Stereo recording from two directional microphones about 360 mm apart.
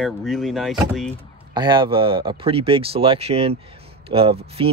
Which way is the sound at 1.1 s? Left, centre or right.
Centre.